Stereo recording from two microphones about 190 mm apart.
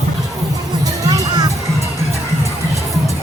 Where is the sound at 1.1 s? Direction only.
20° right (ahead or behind).